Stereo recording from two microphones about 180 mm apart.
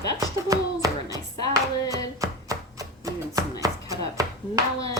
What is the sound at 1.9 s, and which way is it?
Chopping, 20° right (ahead or behind).